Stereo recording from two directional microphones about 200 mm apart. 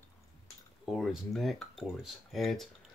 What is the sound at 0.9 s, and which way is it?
Speech, centre (ahead or behind).